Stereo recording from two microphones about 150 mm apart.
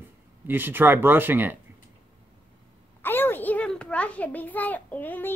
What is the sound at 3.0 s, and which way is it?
A child's voice, 15° left (ahead or behind).